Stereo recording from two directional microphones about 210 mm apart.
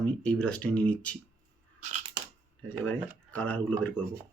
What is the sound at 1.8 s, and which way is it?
Scissors, 35° right (ahead or behind).